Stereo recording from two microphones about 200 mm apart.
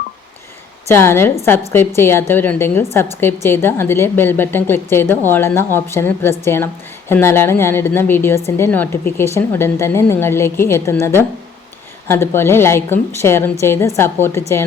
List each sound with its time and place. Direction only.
0.9 s a woman's voice: 15° left (ahead or behind)